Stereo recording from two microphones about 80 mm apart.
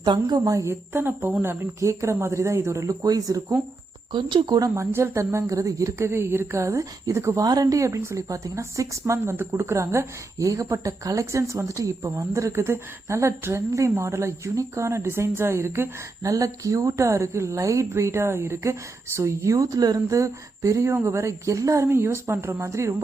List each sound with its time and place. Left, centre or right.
0.0 s a woman's voice: right
0.5 s a woman's voice: right
4.1 s speech: right
4.6 s a woman's voice: right
6.1 s a woman's voice: right
7.4 s a woman's voice: right
21.8 s a woman's voice: right